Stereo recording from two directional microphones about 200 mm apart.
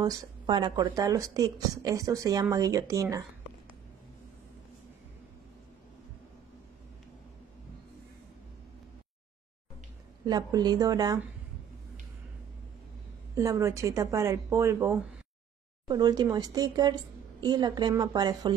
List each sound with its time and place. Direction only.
0.0 s speech: 20° right (ahead or behind)
10.2 s a woman's voice: 20° right (ahead or behind)
13.3 s a woman's voice: 15° right (ahead or behind)